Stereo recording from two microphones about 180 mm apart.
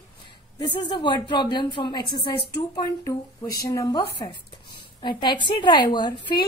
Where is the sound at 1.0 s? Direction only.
25° left (ahead or behind).